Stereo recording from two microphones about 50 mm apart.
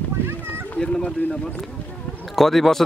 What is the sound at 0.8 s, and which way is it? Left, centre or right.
Speech, centre.